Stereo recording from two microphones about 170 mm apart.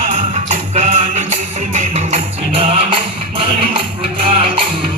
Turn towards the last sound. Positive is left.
turn(degrees=-35)  # may be behind; listen again after turning